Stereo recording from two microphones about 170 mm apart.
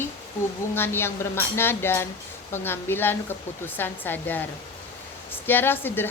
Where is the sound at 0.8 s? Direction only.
15° left (ahead or behind).